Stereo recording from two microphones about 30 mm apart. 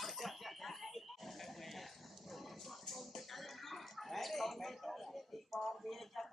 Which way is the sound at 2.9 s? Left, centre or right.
Centre.